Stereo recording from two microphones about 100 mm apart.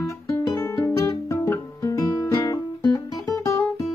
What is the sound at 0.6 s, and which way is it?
Music, 25° left (ahead or behind).